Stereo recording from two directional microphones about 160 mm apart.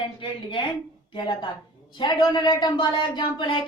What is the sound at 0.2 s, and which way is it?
A woman's voice, 30° left (ahead or behind).